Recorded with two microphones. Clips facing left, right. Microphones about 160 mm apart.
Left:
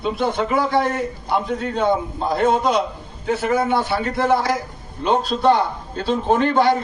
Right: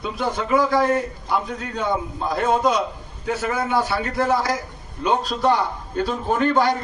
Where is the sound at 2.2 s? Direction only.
30° left (ahead or behind).